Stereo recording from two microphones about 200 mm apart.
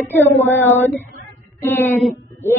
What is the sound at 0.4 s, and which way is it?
Child singing, 10° left (ahead or behind).